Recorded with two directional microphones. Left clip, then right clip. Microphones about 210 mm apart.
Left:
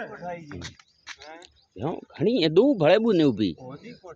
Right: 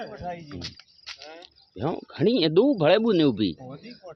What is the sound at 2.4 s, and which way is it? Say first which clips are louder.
Speech: left 2 dB; 10° left (ahead or behind).